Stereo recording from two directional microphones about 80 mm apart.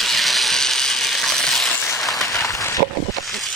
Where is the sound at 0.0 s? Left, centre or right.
Centre.